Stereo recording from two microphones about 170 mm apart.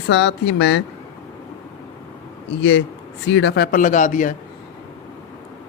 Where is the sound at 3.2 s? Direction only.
90° left; by 4.3 s 50° left (ahead or behind).